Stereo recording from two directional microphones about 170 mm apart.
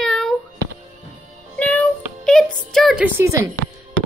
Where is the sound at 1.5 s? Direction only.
5° left (ahead or behind); by 3.4 s 15° right (ahead or behind).